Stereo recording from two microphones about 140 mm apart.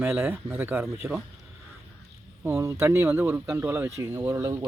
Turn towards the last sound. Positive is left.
turn(degrees=-20)  # may be behind; listen again after turning